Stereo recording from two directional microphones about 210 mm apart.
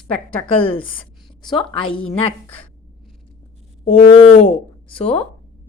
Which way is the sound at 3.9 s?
25° left (ahead or behind).